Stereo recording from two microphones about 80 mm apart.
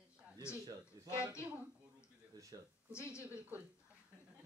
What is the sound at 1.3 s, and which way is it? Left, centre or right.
Speech, centre.